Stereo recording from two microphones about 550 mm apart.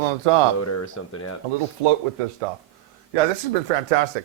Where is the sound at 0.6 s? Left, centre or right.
Left.